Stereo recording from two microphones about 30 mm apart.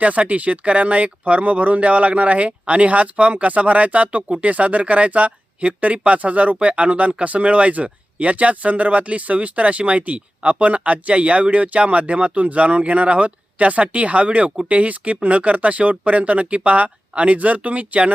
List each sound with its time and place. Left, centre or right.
0.0 s speech: right
12.5 s speech: right